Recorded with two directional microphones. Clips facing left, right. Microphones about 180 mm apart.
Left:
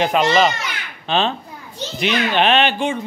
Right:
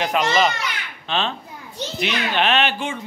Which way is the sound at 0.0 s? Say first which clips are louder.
Left 4 dB; 30° left (ahead or behind).